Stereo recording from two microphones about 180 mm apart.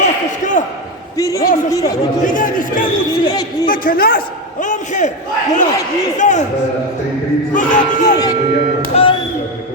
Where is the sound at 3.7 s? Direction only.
50° left (ahead or behind).